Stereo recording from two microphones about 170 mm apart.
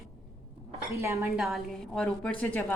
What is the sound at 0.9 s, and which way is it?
Speech, 15° right (ahead or behind).